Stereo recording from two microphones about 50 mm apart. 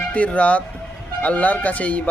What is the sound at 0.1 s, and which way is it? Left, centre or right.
Speech, left.